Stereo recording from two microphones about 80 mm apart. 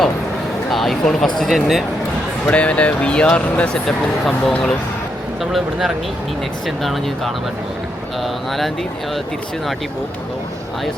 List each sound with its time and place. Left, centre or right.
0.7 s speech: centre
2.5 s speech: centre